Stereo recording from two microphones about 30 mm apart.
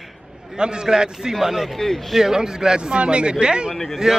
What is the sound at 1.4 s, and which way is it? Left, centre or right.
Speech, centre.